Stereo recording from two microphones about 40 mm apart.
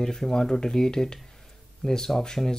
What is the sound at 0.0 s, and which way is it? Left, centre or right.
Speech, centre.